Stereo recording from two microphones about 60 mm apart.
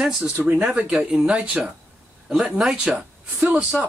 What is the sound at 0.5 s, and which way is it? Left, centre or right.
Speech, right.